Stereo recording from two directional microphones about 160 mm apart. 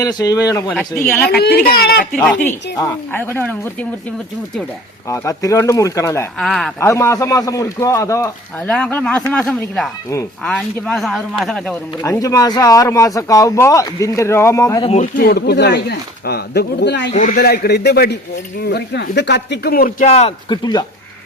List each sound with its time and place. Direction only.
0.0 s speech: 25° left (ahead or behind)
1.3 s speech: 85° left
2.1 s speech: 10° left (ahead or behind)
5.0 s speech: 20° left (ahead or behind)
6.4 s a man's voice: centre (ahead or behind)
6.7 s speech: 15° left (ahead or behind)
8.6 s a man's voice: 5° left (ahead or behind)
12.0 s speech: 20° left (ahead or behind)
15.1 s speech: 75° left (ahead or behind); by 17.1 s 90° left
17.2 s speech: 65° left (ahead or behind)
20.1 s speech: 40° left (ahead or behind)
20.5 s speech: 25° left (ahead or behind)